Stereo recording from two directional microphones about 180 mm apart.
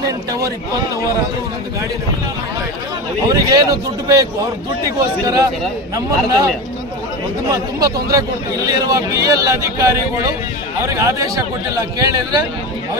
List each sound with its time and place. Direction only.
0.0 s speech: 20° right (ahead or behind)
3.3 s a man's voice: 20° right (ahead or behind)